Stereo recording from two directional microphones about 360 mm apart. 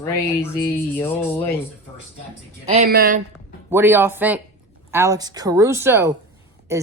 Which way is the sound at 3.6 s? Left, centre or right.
Centre.